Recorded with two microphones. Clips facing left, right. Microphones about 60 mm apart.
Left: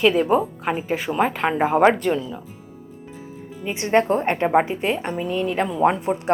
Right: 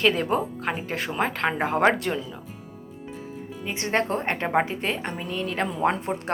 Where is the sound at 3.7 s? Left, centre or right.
Left.